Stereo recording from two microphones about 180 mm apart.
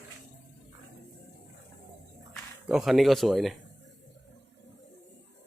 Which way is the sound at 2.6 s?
Centre (ahead or behind).